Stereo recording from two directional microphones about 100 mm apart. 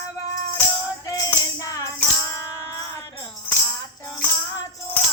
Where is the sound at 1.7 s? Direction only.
35° left (ahead or behind).